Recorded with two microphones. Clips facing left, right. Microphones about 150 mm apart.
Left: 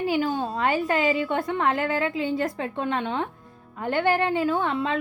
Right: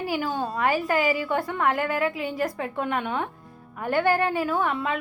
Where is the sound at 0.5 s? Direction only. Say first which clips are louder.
Right 2 dB; 20° left (ahead or behind).